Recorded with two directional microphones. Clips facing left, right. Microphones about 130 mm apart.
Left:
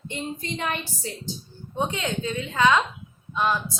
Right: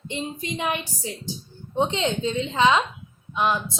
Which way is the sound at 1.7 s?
25° right (ahead or behind).